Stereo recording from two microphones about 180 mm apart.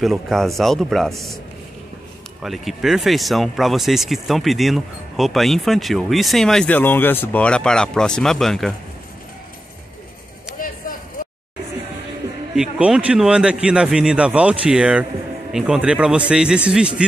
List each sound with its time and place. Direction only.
0.0 s speech: centre (ahead or behind)
2.4 s speech: centre (ahead or behind)
11.2 s a sound: 50° left (ahead or behind)
12.5 s speech: 5° right (ahead or behind)